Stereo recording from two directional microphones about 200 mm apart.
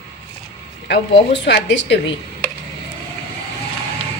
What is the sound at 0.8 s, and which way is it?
Speech, 60° left (ahead or behind).